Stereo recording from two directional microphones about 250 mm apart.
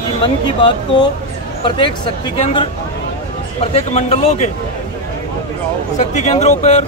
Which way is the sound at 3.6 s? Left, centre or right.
Left.